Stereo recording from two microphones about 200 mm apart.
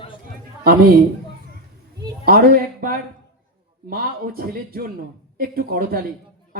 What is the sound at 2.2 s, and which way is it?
Speech, 50° right (ahead or behind).